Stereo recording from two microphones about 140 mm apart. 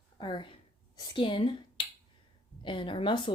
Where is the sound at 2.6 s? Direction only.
35° left (ahead or behind).